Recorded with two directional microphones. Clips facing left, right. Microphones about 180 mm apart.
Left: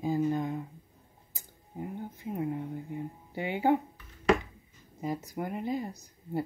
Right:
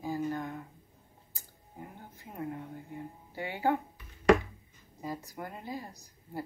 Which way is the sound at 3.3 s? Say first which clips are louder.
Left 3 dB; 20° left (ahead or behind).